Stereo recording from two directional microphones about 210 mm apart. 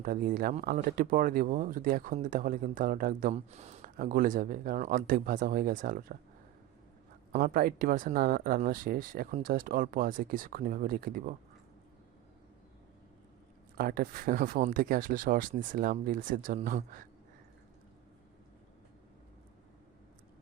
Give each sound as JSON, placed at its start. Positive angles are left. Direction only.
{"t": 0.0, "sound": "speech", "side_deg": -40}
{"t": 7.3, "sound": "speech", "side_deg": -45}
{"t": 13.7, "sound": "speech", "side_deg": -45}